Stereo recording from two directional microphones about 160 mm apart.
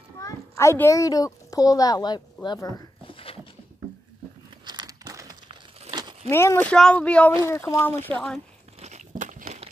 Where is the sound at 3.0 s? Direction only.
35° left (ahead or behind).